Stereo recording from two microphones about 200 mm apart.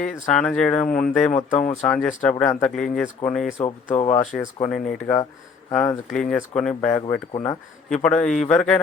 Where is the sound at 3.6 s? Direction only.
30° left (ahead or behind).